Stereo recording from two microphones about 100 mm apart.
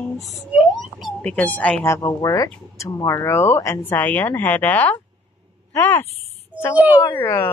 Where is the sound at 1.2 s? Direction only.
20° left (ahead or behind).